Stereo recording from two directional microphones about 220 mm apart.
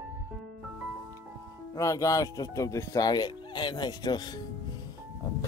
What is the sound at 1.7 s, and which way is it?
Speech, 15° left (ahead or behind).